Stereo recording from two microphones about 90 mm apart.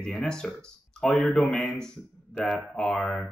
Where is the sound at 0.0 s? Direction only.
5° left (ahead or behind).